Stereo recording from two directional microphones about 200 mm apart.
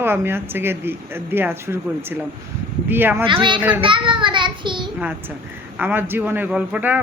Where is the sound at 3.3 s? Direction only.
25° right (ahead or behind).